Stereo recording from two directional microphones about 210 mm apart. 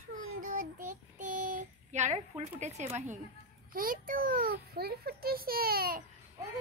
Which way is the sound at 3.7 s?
40° right (ahead or behind).